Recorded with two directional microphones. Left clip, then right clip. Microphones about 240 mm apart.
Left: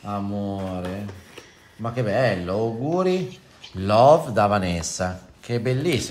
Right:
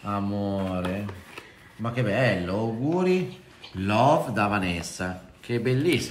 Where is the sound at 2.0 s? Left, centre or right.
Left.